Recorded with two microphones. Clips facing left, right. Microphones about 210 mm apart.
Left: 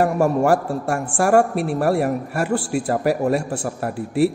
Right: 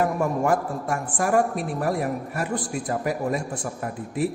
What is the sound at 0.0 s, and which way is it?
A man's voice, 75° left (ahead or behind).